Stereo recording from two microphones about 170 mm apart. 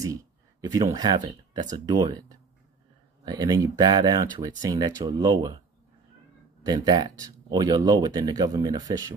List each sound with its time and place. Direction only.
0.0 s speech: 20° right (ahead or behind)
6.6 s speech: 25° right (ahead or behind)